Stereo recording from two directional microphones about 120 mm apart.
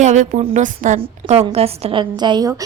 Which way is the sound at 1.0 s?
60° right (ahead or behind).